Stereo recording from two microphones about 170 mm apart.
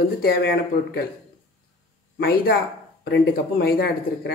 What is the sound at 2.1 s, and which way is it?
Speech, 65° left (ahead or behind).